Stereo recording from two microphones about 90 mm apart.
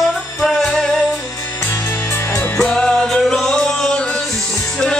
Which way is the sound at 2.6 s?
5° left (ahead or behind).